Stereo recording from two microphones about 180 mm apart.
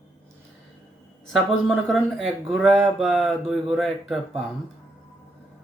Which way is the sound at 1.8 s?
Centre (ahead or behind).